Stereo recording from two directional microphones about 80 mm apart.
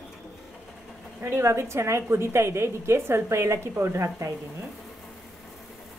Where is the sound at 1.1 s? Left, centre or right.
Right.